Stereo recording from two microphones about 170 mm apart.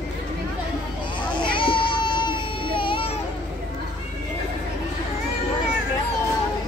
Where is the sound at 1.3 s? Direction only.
30° left (ahead or behind).